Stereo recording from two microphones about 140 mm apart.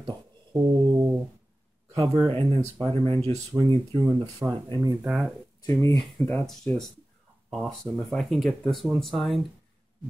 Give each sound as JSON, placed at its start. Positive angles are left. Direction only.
{"t": 0.0, "sound": "a sound", "side_deg": -30}
{"t": 2.0, "sound": "speech", "side_deg": -30}
{"t": 5.0, "sound": "speech", "side_deg": -5}
{"t": 5.7, "sound": "speech", "side_deg": 20}